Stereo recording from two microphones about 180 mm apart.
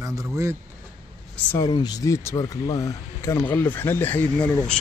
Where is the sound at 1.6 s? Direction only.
20° left (ahead or behind).